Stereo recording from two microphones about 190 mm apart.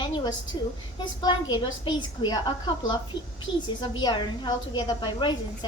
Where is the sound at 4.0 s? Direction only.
25° left (ahead or behind).